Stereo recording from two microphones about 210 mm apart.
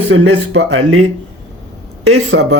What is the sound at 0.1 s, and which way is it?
Speech, 65° right (ahead or behind).